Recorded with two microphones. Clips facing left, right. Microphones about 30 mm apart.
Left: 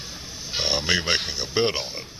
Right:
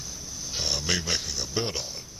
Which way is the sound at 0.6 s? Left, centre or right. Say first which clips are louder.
Left 5 dB; left.